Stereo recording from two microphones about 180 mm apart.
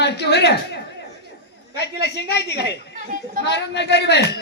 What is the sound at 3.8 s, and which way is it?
Speech, 70° left (ahead or behind).